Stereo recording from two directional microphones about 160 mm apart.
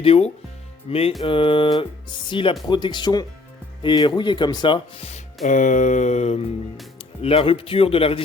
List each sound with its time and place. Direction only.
0.0 s speech: 40° left (ahead or behind)
5.5 s a sound: 50° left (ahead or behind)
7.2 s speech: 40° left (ahead or behind)